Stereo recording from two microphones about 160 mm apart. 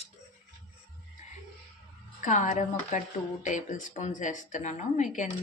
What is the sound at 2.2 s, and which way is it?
A woman's voice, 50° left (ahead or behind).